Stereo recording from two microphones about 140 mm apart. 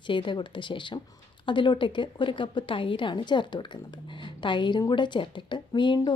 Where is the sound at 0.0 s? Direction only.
35° left (ahead or behind).